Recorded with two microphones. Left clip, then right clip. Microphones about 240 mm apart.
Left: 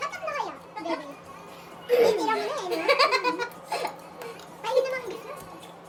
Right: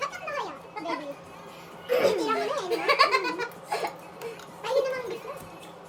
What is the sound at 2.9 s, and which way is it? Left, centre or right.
Giggle, centre.